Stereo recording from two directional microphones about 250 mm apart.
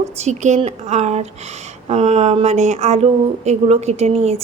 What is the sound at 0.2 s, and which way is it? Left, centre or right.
Speech, right.